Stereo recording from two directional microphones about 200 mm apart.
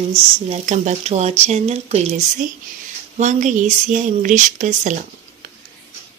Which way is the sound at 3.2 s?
40° right (ahead or behind).